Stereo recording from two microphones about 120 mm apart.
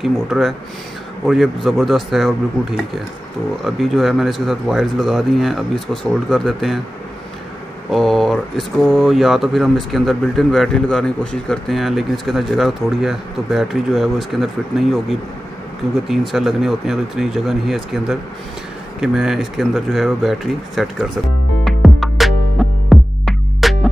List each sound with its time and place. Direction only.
0.0 s speech: centre (ahead or behind)
3.6 s speech: centre (ahead or behind)
7.9 s speech: centre (ahead or behind)
21.6 s music: centre (ahead or behind)